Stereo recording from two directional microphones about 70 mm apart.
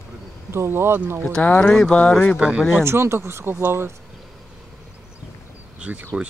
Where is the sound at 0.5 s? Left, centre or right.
Right.